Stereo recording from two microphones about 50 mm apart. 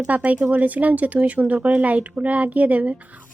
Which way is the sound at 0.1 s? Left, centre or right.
Right.